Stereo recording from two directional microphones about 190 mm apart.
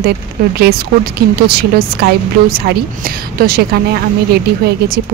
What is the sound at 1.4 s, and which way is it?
Speech, 55° right (ahead or behind).